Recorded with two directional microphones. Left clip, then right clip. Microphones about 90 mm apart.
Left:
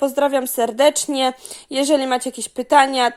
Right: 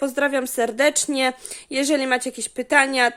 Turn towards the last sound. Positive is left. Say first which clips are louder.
# left 3 dB
turn(degrees=5)  # may be behind; listen again after turning